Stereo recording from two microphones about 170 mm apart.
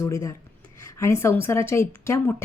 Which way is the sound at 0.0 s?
20° left (ahead or behind).